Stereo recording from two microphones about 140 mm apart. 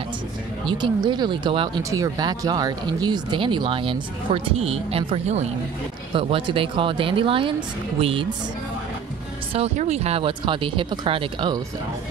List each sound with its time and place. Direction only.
0.7 s speech: 35° right (ahead or behind)
1.8 s speech: 25° right (ahead or behind); by 5.5 s 50° right (ahead or behind)
6.1 s speech: 40° right (ahead or behind)
9.8 s speech: 50° right (ahead or behind)